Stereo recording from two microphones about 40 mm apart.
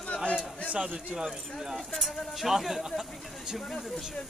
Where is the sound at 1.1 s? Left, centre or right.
Centre.